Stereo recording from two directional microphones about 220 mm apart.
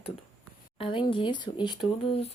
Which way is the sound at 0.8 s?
25° left (ahead or behind).